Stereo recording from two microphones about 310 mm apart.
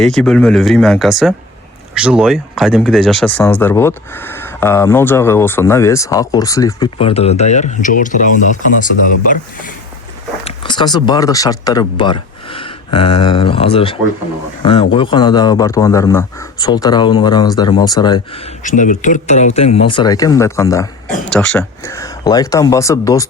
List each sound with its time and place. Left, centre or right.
0.0 s speech: centre; by 9.7 s left
10.4 s speech: centre
18.6 s speech: left